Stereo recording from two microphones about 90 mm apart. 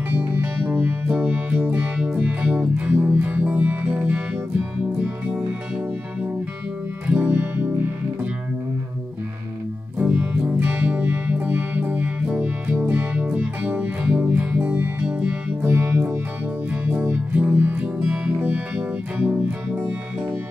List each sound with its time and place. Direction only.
0.1 s music: 20° right (ahead or behind)
7.1 s music: 20° right (ahead or behind)
9.9 s music: 15° right (ahead or behind)